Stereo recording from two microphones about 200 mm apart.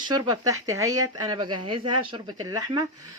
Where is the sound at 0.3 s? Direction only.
15° right (ahead or behind).